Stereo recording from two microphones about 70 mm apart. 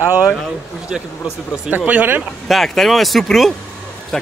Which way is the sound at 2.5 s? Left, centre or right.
Centre.